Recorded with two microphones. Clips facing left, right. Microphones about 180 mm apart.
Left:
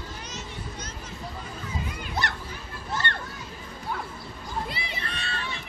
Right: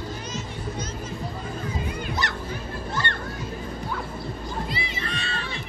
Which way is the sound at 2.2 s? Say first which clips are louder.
Right 1 dB; 60° left (ahead or behind).